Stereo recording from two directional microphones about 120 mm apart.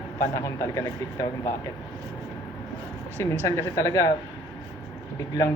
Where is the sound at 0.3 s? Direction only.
25° left (ahead or behind).